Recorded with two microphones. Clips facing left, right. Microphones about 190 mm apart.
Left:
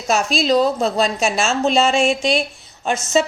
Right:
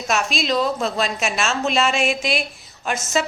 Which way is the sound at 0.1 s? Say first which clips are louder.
Left 5 dB; 35° left (ahead or behind).